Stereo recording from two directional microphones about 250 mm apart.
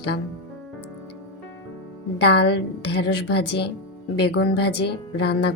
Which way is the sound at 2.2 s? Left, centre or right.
Left.